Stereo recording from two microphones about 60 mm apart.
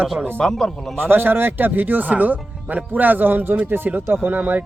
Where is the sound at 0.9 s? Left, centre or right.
Right.